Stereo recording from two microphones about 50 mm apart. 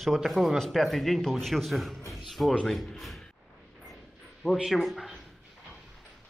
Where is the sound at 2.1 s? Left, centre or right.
Centre.